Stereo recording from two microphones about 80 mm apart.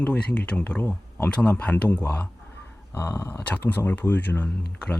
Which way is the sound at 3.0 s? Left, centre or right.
Left.